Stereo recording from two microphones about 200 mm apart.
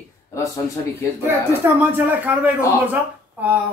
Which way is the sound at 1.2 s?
10° right (ahead or behind).